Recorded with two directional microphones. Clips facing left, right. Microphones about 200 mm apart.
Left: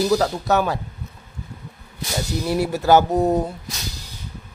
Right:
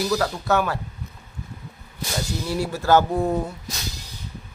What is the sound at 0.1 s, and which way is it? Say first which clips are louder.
Mantra: left 3 dB; 20° left (ahead or behind).